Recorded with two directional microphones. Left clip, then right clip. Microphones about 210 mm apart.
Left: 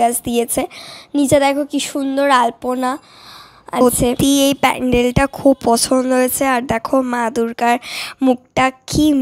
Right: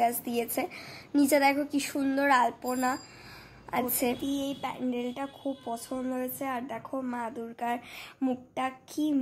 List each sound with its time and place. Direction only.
0.0 s a woman's voice: 40° left (ahead or behind)